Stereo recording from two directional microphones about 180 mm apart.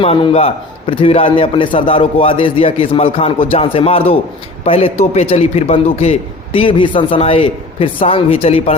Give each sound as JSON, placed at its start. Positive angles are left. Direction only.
{"t": 0.0, "sound": "a man's voice", "side_deg": 30}